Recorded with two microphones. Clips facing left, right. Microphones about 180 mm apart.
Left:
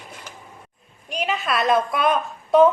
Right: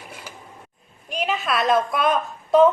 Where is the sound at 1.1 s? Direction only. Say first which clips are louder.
Even; centre (ahead or behind).